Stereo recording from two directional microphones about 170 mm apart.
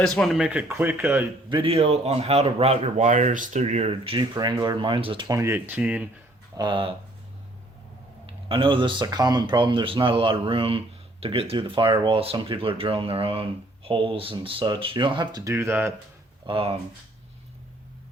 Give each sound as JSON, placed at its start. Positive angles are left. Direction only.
{"t": 0.0, "sound": "speech", "side_deg": 5}
{"t": 1.5, "sound": "speech", "side_deg": -30}
{"t": 5.3, "sound": "speech", "side_deg": -15}
{"t": 6.6, "sound": "speech", "side_deg": -30}
{"t": 8.3, "sound": "speech", "side_deg": -30}
{"t": 16.5, "sound": "speech", "side_deg": -30}